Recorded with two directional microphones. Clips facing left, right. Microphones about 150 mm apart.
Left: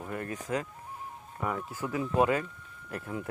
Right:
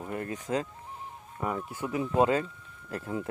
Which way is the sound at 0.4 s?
30° right (ahead or behind).